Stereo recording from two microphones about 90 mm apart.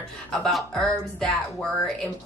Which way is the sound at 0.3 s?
Centre (ahead or behind).